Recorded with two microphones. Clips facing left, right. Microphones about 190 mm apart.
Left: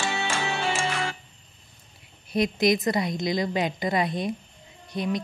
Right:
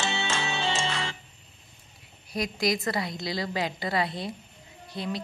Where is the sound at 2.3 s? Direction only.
20° left (ahead or behind).